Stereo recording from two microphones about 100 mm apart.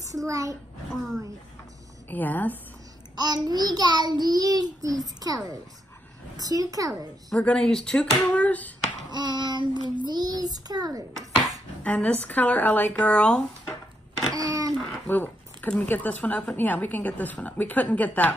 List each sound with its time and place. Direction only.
0.3 s child singing: 35° right (ahead or behind)
0.9 s a woman's voice: centre (ahead or behind)
2.0 s speech: 15° left (ahead or behind)
3.2 s a child's voice: 40° right (ahead or behind)
4.2 s child singing: 40° right (ahead or behind)
7.3 s speech: 10° left (ahead or behind)
9.1 s a child's voice: 45° right (ahead or behind)
11.8 s speech: 15° left (ahead or behind)
14.3 s a sound: 35° right (ahead or behind)
15.0 s speech: 15° left (ahead or behind)